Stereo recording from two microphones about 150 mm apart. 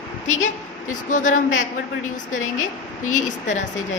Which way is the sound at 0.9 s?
55° left (ahead or behind).